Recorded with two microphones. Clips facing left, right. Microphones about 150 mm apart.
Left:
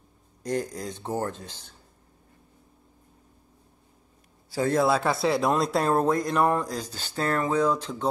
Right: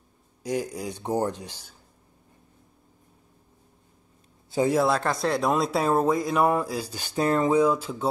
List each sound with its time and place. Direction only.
0.4 s speech: 10° right (ahead or behind)
4.5 s a man's voice: 20° right (ahead or behind)
4.7 s speech: centre (ahead or behind)